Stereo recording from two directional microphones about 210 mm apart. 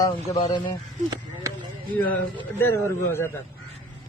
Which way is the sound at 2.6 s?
10° left (ahead or behind).